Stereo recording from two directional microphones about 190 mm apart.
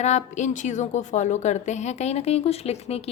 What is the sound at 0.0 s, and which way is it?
A woman's voice, 40° left (ahead or behind).